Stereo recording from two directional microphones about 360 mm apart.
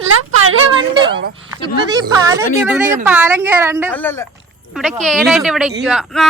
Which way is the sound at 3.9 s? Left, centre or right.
Centre.